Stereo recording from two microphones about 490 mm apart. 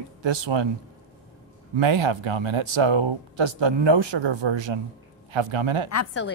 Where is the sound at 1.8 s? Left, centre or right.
Right.